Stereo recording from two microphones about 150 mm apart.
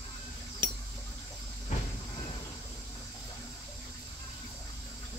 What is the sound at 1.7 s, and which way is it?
Train, 50° left (ahead or behind).